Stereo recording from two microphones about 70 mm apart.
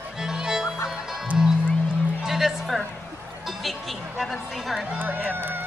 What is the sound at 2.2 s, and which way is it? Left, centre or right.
Music, centre.